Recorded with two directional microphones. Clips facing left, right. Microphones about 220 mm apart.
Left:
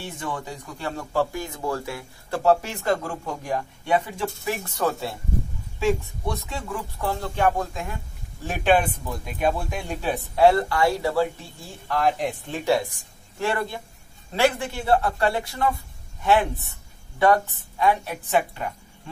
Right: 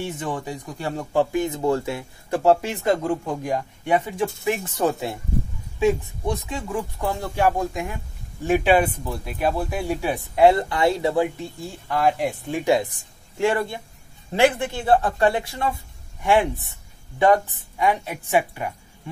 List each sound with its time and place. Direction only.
0.2 s speech: 20° right (ahead or behind)
11.9 s speech: 10° right (ahead or behind)